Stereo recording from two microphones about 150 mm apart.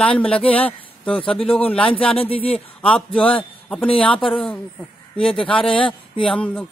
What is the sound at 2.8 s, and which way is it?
A man's voice, 5° left (ahead or behind).